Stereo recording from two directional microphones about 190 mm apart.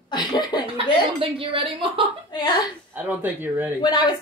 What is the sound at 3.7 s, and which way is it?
Speech, 20° left (ahead or behind).